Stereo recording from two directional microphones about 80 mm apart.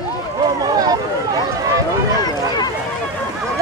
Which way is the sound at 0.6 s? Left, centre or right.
Right.